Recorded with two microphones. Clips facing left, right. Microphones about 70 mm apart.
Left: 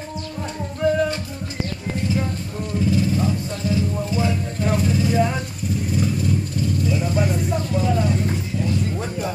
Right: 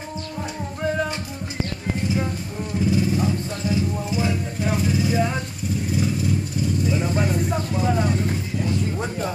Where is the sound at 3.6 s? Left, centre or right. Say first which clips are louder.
Left 1 dB; right.